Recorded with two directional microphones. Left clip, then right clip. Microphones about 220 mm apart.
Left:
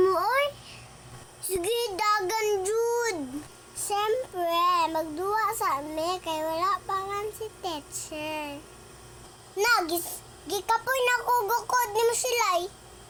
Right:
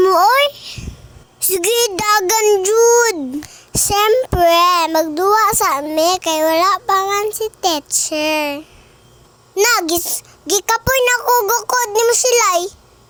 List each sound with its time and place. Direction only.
0.0 s babbling: 45° right (ahead or behind)
1.5 s a sound: 45° right (ahead or behind)
3.8 s child singing: 50° right (ahead or behind)
9.6 s a child's voice: 45° right (ahead or behind)